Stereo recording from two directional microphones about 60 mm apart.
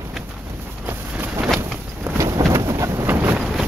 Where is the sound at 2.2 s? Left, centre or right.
Right.